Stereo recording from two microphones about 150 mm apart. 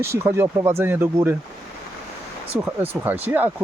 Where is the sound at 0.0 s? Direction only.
15° right (ahead or behind).